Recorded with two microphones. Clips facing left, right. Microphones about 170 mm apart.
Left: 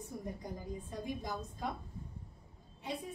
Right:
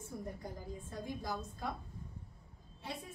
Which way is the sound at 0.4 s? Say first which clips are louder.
Left 2 dB; 15° left (ahead or behind).